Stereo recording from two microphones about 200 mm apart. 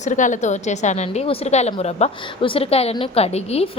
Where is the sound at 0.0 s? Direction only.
40° left (ahead or behind).